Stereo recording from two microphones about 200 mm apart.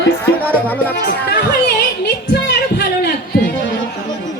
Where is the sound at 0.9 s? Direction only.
55° left (ahead or behind).